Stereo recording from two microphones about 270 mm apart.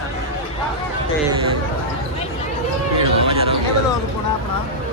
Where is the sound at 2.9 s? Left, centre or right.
Right.